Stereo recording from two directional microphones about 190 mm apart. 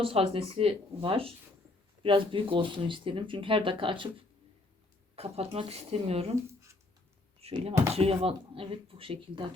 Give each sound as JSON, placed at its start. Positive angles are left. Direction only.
{"t": 0.0, "sound": "speech", "side_deg": -30}
{"t": 5.1, "sound": "speech", "side_deg": -35}
{"t": 6.5, "sound": "a sound", "side_deg": -15}
{"t": 7.3, "sound": "speech", "side_deg": -30}